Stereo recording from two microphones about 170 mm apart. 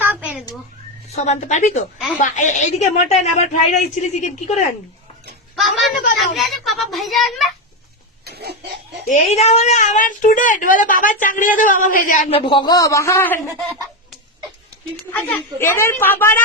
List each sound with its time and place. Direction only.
0.0 s a sound: 10° right (ahead or behind)
1.1 s a woman's voice: 45° left (ahead or behind)
6.1 s a child's voice: centre (ahead or behind)
8.2 s a sound: 70° right (ahead or behind)
9.0 s a woman's voice: 45° left (ahead or behind)
12.3 s a man's voice: 30° left (ahead or behind); by 13.4 s 15° left (ahead or behind)
15.1 s a woman's voice: 10° left (ahead or behind)